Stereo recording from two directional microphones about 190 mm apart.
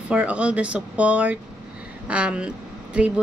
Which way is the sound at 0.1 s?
5° right (ahead or behind).